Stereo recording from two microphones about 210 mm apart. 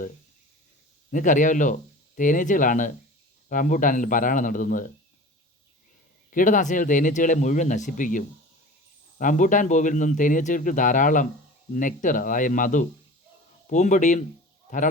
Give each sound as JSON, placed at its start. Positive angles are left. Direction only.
{"t": 1.1, "sound": "speech", "side_deg": 35}
{"t": 6.3, "sound": "speech", "side_deg": 40}